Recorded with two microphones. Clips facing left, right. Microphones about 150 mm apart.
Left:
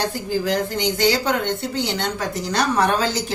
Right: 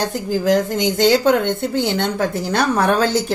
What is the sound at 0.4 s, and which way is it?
A woman's voice, 45° right (ahead or behind).